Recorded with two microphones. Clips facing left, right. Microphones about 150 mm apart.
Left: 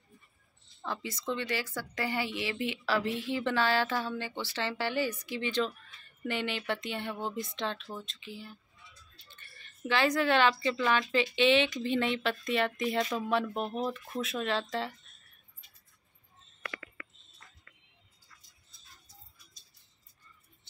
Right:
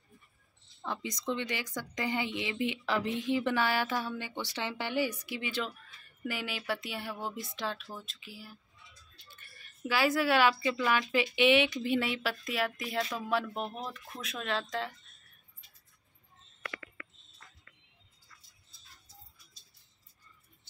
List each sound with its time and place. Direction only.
0.8 s speech: 20° right (ahead or behind); by 14.9 s centre (ahead or behind)